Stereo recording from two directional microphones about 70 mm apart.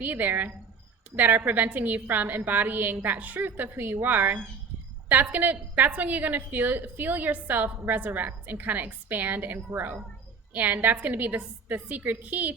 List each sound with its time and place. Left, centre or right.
0.0 s a woman's voice: right